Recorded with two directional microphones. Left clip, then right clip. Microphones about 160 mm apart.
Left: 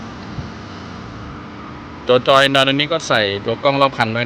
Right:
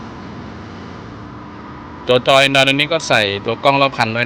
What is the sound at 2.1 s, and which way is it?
Speech, 15° left (ahead or behind).